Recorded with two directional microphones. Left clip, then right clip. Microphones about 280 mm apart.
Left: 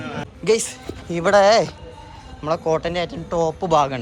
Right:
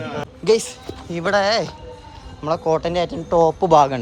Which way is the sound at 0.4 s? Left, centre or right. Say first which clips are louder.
Right 2 dB; centre.